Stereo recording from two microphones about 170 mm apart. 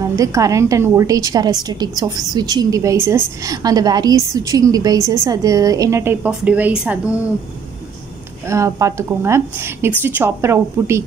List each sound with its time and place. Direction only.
0.0 s a woman's voice: 20° right (ahead or behind)
8.5 s speech: 20° right (ahead or behind)